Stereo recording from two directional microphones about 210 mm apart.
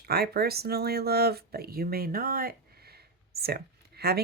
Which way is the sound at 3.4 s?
50° right (ahead or behind).